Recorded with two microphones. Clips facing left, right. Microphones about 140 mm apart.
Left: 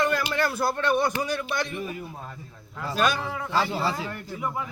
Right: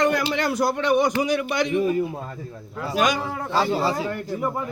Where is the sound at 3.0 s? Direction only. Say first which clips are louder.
Right 3 dB; 15° right (ahead or behind).